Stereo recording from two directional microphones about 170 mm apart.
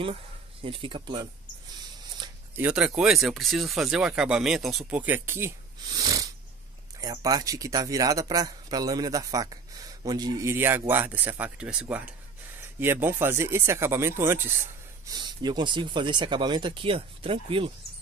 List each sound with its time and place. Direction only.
0.6 s speech: 30° right (ahead or behind)
2.5 s speech: 5° right (ahead or behind)
5.9 s sneeze: 20° right (ahead or behind)
7.0 s speech: 20° right (ahead or behind)
15.0 s speech: 25° right (ahead or behind)